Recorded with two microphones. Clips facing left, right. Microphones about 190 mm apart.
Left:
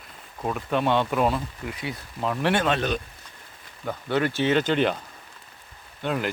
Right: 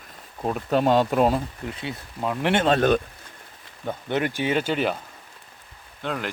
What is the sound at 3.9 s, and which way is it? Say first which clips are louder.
Speech: left 1 dB; 20° right (ahead or behind).